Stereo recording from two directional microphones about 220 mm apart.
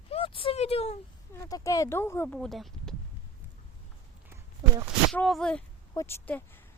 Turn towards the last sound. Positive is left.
turn(degrees=10)  # may be behind; listen again after turning